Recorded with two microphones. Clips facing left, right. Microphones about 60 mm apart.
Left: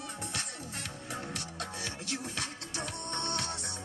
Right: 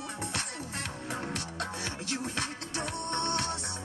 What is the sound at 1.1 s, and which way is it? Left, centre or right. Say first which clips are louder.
Music: right 3 dB; right.